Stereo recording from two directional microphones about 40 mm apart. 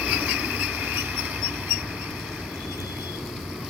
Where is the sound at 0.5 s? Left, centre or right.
Right.